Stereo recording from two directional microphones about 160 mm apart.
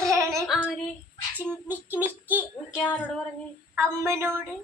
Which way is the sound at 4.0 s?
15° right (ahead or behind).